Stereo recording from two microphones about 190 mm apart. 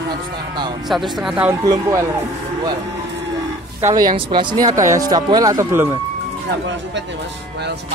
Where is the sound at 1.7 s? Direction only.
15° right (ahead or behind).